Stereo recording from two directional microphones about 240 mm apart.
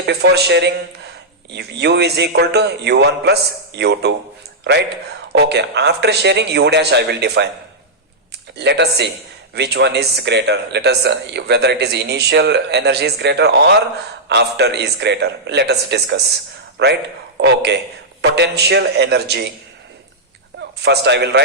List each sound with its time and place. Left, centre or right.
0.0 s speech: right
5.3 s speech: right
8.5 s a man's voice: right
20.6 s a man's voice: right